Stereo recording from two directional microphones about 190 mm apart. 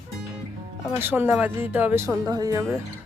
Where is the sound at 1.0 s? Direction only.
10° right (ahead or behind).